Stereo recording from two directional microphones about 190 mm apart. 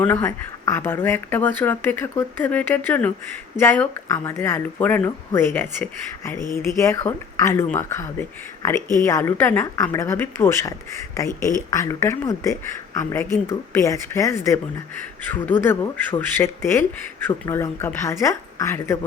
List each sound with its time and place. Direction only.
0.0 s speech: 10° left (ahead or behind)